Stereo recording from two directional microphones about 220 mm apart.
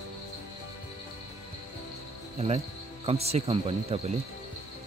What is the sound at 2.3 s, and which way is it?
Speech, 30° right (ahead or behind).